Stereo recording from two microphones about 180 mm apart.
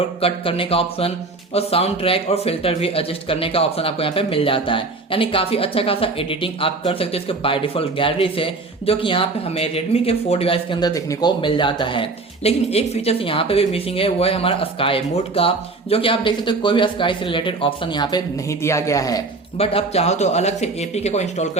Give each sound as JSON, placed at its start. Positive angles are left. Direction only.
{"t": 0.2, "sound": "speech", "side_deg": 30}
{"t": 19.5, "sound": "speech", "side_deg": 35}